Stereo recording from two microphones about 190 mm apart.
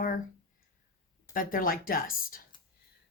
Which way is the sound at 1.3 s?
50° left (ahead or behind).